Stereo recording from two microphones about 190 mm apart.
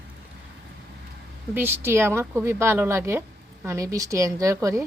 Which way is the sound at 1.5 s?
10° right (ahead or behind).